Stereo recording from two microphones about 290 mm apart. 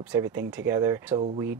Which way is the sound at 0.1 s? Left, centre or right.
Centre.